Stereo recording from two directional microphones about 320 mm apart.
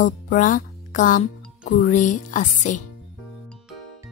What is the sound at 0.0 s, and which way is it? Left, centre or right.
Speech, left.